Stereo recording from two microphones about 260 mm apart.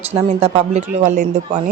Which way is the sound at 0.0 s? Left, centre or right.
Right.